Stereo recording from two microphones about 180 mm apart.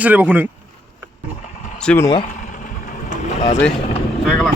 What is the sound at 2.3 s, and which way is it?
Vehicle, 45° left (ahead or behind).